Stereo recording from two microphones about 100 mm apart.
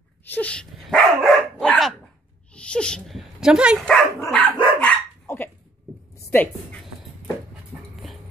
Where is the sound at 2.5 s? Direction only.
10° left (ahead or behind).